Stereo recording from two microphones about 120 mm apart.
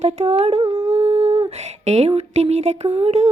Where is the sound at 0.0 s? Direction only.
65° right (ahead or behind).